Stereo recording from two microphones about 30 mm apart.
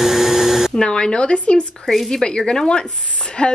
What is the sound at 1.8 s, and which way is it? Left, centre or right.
Speech, centre.